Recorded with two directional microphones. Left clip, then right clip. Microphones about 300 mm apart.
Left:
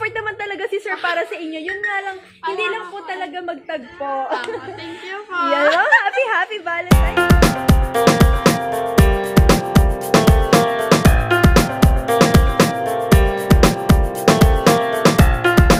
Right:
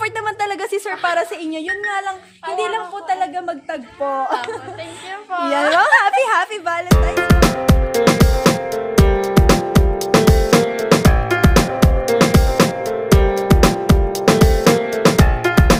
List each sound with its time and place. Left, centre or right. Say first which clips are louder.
0.0 s a sound: right 3 dB; right
5.3 s a woman's voice: left 1 dB; centre
5.8 s speech: right 2 dB; right
6.8 s music: left 2 dB; centre